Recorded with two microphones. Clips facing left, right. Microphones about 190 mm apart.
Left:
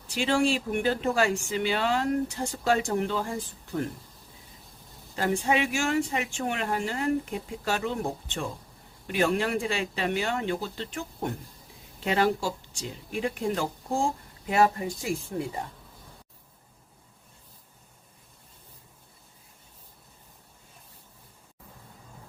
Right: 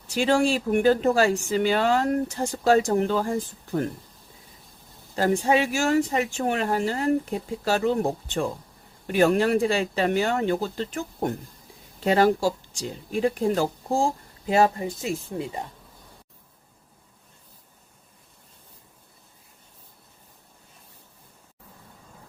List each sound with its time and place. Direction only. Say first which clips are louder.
0.1 s speech: right 4 dB; 45° right (ahead or behind)
5.1 s speech: right 5 dB; 40° right (ahead or behind); by 15.6 s 20° right (ahead or behind)